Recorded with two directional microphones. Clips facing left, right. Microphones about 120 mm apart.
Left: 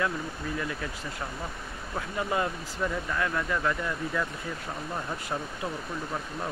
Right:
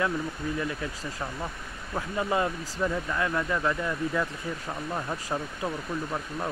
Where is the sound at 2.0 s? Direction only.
25° right (ahead or behind).